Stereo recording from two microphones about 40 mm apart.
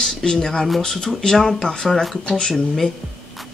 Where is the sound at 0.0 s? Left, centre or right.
Centre.